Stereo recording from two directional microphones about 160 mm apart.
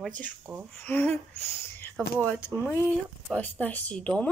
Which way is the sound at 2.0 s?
15° right (ahead or behind).